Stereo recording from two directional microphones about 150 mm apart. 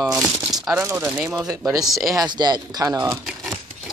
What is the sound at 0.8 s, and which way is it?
Speech, 15° right (ahead or behind).